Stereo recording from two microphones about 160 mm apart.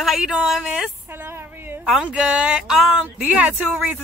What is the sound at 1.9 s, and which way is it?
Speech, 5° right (ahead or behind).